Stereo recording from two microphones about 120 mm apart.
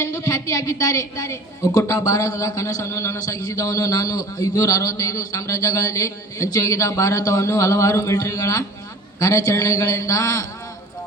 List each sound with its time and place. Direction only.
0.2 s a man's voice: 25° left (ahead or behind)